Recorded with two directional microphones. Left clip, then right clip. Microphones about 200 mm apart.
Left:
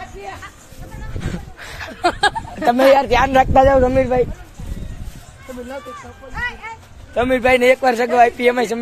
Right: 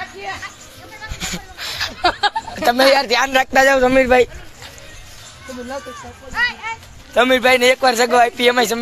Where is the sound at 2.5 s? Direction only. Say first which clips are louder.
Left 1 dB; 10° left (ahead or behind).